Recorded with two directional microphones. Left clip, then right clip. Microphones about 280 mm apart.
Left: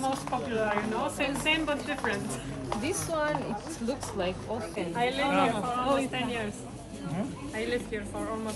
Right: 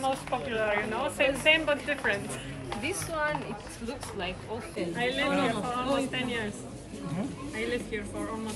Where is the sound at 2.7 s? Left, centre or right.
Left.